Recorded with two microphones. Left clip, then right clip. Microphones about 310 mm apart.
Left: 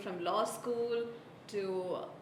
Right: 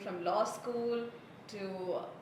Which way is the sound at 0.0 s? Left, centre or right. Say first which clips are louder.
Right 1 dB; left.